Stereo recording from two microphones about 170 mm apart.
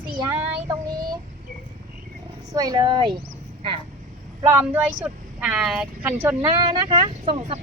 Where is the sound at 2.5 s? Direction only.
20° right (ahead or behind).